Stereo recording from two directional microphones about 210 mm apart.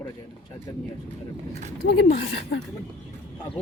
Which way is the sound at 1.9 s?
55° left (ahead or behind).